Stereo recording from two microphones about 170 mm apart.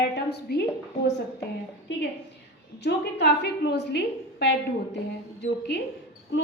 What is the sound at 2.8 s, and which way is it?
A woman's voice, 80° left.